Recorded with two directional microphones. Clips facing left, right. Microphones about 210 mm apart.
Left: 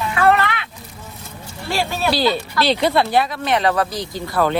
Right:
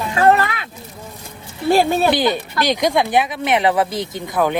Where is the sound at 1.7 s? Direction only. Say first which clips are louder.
Right 8 dB; 50° right (ahead or behind).